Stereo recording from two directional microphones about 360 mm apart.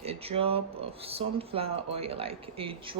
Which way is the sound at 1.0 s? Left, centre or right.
Centre.